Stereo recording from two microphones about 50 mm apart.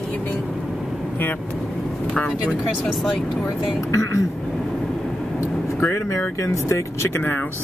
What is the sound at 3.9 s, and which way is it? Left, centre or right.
Speech, left.